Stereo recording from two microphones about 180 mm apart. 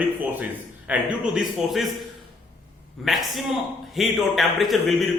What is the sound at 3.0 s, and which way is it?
A man's voice, centre (ahead or behind).